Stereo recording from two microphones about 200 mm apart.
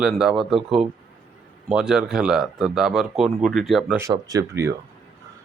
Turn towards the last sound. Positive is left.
turn(degrees=-15)  # may be behind; listen again after turning